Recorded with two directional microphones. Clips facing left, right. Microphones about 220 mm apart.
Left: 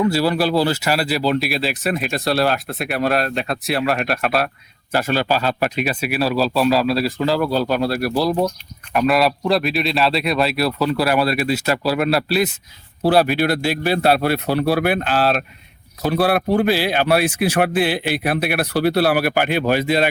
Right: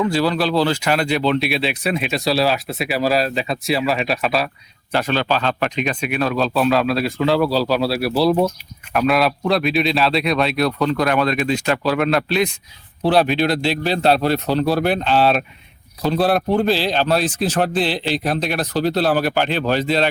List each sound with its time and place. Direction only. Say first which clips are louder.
0.1 s a man's voice: left 1 dB; 10° left (ahead or behind)